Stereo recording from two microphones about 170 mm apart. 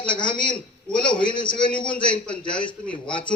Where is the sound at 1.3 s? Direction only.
25° left (ahead or behind).